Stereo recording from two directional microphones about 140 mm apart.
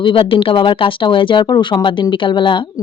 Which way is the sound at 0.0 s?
40° left (ahead or behind).